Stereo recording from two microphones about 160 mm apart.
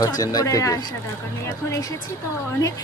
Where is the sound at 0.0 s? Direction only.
25° left (ahead or behind).